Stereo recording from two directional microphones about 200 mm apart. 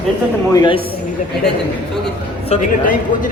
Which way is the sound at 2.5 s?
40° left (ahead or behind).